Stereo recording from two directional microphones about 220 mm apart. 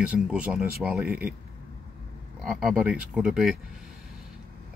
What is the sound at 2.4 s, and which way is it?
Speech, 5° right (ahead or behind).